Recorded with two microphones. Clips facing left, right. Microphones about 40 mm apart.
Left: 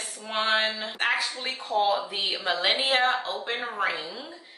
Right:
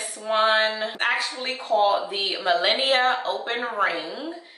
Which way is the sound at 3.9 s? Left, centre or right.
Right.